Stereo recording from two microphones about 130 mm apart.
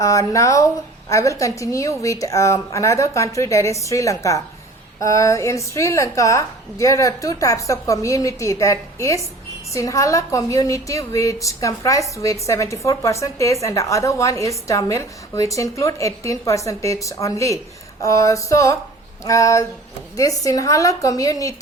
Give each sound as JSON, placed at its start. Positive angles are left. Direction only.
{"t": 0.0, "sound": "a woman's voice", "side_deg": 25}